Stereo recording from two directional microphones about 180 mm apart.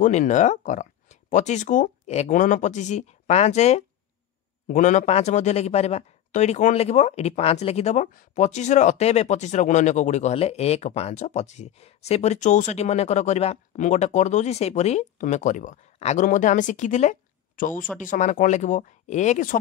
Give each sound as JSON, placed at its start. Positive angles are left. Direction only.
{"t": 0.0, "sound": "a man's voice", "side_deg": 45}